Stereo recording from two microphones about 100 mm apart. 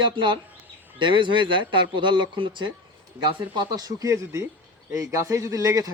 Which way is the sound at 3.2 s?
45° right (ahead or behind).